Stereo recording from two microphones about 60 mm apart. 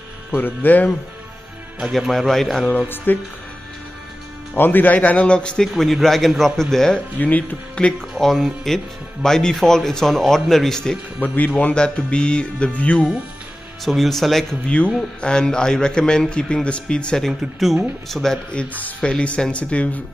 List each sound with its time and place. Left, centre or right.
0.3 s speech: left
1.8 s speech: centre
3.1 s speech: left
4.6 s speech: left; by 5.7 s centre
5.7 s speech: centre
7.2 s speech: left
8.2 s speech: centre
11.1 s speech: left
11.7 s a man's voice: centre
13.8 s speech: centre
15.0 s a man's voice: centre
17.3 s speech: centre
18.5 s speech: left